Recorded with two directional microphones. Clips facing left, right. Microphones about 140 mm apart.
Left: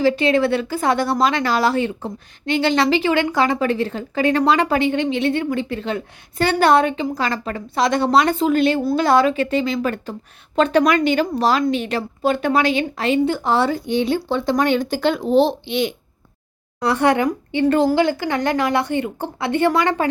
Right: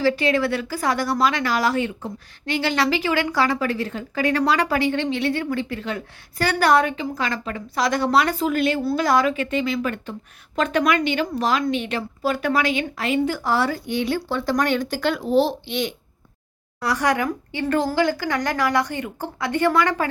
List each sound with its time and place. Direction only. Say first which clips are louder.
0.0 s speech: left 3 dB; 25° left (ahead or behind)
7.8 s a woman's voice: left 3 dB; 25° left (ahead or behind)
12.2 s speech: left 4 dB; 25° left (ahead or behind)
16.8 s speech: left 5 dB; 25° left (ahead or behind)